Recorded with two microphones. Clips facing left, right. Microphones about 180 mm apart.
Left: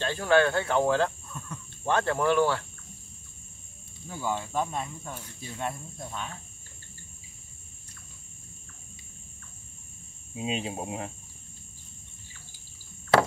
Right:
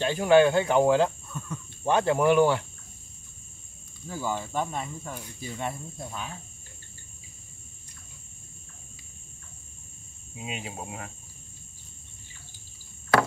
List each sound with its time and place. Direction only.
0.0 s speech: 15° right (ahead or behind)
1.3 s speech: centre (ahead or behind)
1.9 s speech: 15° right (ahead or behind)
4.1 s speech: centre (ahead or behind)
10.3 s speech: 25° left (ahead or behind)